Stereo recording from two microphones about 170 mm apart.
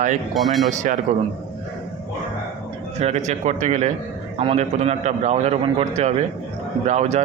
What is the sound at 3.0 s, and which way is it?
A man's voice, 40° right (ahead or behind).